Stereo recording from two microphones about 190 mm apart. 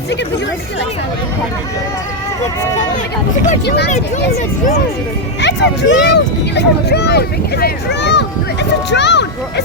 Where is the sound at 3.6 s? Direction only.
60° left (ahead or behind).